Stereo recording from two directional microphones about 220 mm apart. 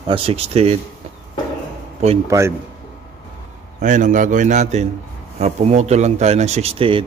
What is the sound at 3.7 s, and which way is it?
A man's voice, 35° right (ahead or behind).